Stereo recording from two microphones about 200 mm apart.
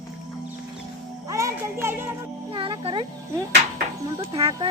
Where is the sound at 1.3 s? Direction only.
15° right (ahead or behind).